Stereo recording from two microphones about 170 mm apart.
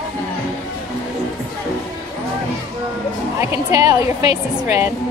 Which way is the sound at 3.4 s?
20° right (ahead or behind).